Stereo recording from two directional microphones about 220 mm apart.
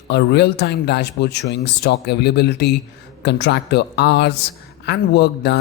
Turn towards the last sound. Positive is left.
turn(degrees=50)  # may be behind; listen again after turning